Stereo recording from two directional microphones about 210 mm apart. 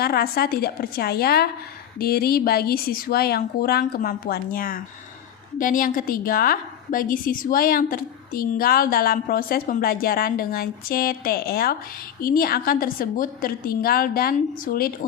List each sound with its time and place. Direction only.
0.0 s a woman's voice: 45° left (ahead or behind)